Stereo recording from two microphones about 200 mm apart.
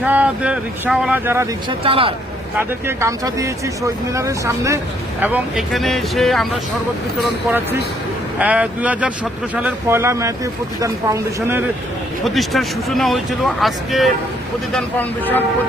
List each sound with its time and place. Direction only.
0.0 s speech: 5° right (ahead or behind)
1.8 s speech: 25° right (ahead or behind)
2.6 s speech: 15° right (ahead or behind)
5.2 s speech: 5° right (ahead or behind)
8.4 s speech: 5° right (ahead or behind)
12.2 s speech: centre (ahead or behind)